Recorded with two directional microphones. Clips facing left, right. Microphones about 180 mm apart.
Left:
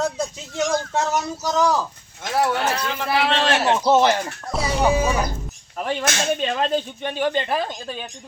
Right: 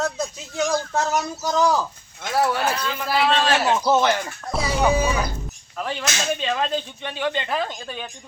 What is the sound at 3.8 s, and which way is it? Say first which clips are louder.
Speech: left 4 dB; 30° left (ahead or behind).